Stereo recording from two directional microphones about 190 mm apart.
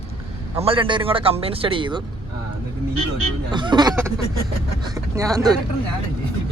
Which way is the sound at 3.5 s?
25° right (ahead or behind).